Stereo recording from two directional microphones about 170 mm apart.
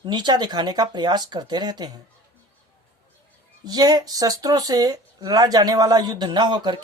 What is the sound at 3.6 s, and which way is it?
A woman's voice, 25° right (ahead or behind).